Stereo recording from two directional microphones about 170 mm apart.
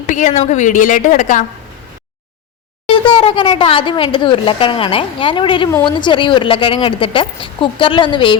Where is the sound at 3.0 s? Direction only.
30° left (ahead or behind).